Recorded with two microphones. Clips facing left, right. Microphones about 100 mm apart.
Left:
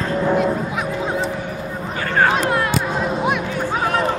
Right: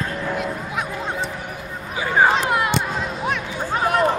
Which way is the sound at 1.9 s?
10° right (ahead or behind).